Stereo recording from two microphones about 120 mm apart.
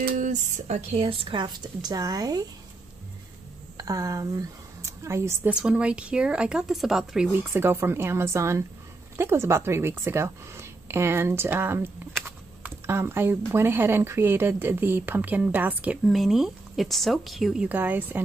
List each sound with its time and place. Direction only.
0.1 s a sound: 90° right; by 1.0 s 65° right (ahead or behind)
1.0 s speech: 50° right (ahead or behind); by 2.4 s 30° right (ahead or behind)
3.7 s a woman's voice: 30° right (ahead or behind)
5.5 s speech: 10° right (ahead or behind)
7.5 s a woman's voice: 20° right (ahead or behind)
16.1 s a woman's voice: centre (ahead or behind)
17.6 s speech: 15° right (ahead or behind)